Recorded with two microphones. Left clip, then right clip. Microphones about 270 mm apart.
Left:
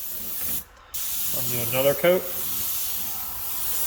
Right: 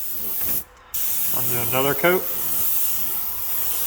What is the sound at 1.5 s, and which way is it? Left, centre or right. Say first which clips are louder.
Speech: even; centre.